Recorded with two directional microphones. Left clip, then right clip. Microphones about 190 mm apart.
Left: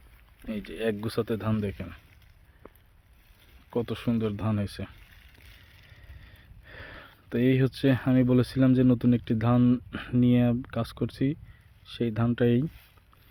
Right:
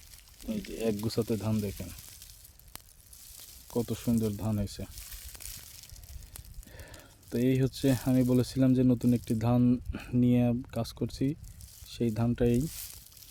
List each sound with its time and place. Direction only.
0.4 s speech: centre (ahead or behind)
3.7 s speech: centre (ahead or behind)
5.4 s crushing: 70° right (ahead or behind)
6.7 s speech: centre (ahead or behind)